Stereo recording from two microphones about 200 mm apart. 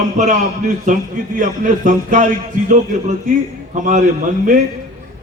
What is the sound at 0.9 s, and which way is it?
Speech, 40° right (ahead or behind).